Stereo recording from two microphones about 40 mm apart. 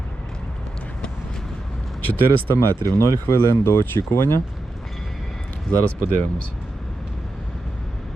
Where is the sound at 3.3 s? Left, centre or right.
Left.